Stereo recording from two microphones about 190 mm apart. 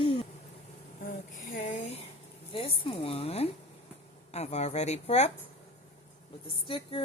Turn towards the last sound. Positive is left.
turn(degrees=30)  # may be behind; listen again after turning